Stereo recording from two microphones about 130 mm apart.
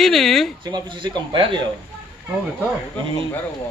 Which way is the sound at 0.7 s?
35° right (ahead or behind).